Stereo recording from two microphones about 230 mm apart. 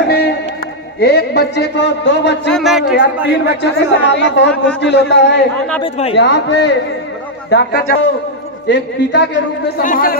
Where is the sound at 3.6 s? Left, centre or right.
Left.